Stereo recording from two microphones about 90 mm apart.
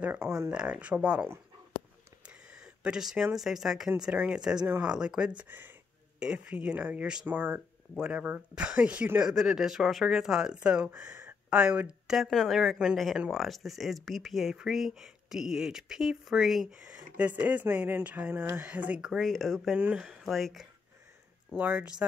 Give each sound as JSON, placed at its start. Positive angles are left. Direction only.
{"t": 0.0, "sound": "speech", "side_deg": -20}
{"t": 0.5, "sound": "speech", "side_deg": -10}
{"t": 2.2, "sound": "a sound", "side_deg": -10}
{"t": 3.3, "sound": "speech", "side_deg": -5}
{"t": 5.4, "sound": "speech", "side_deg": -20}
{"t": 6.1, "sound": "speech", "side_deg": -10}
{"t": 7.9, "sound": "speech", "side_deg": -10}
{"t": 9.3, "sound": "speech", "side_deg": -5}
{"t": 11.2, "sound": "a sound", "side_deg": -10}
{"t": 12.2, "sound": "speech", "side_deg": 0}
{"t": 18.9, "sound": "speech", "side_deg": -5}
{"t": 21.5, "sound": "speech", "side_deg": -10}